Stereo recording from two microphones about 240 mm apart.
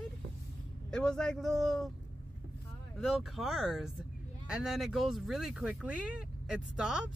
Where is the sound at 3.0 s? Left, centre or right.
Centre.